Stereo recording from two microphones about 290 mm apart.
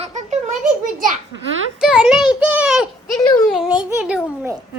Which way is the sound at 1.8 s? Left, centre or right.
Centre.